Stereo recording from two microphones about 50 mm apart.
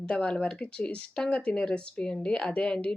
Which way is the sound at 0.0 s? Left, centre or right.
Centre.